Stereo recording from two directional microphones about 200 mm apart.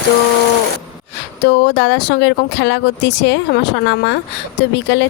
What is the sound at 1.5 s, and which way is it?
Speech, 60° left (ahead or behind).